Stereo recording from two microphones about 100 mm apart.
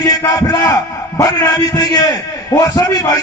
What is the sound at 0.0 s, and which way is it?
A man's voice, 35° left (ahead or behind).